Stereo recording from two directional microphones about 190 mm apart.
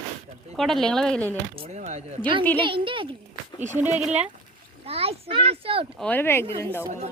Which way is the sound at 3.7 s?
10° right (ahead or behind).